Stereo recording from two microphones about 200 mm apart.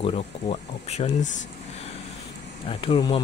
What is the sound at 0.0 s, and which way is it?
Speech, 30° left (ahead or behind).